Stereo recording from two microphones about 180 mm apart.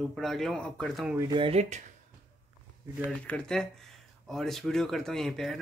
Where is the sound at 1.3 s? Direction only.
35° right (ahead or behind).